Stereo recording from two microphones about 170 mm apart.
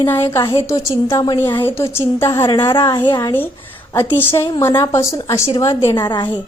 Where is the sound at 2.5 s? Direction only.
30° left (ahead or behind).